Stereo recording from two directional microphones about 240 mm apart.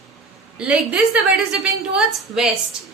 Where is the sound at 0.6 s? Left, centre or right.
Centre.